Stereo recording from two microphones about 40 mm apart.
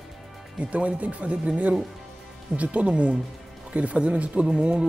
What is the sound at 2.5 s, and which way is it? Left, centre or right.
Speech, right.